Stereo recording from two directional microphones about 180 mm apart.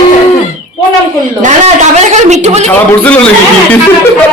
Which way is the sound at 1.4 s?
40° right (ahead or behind).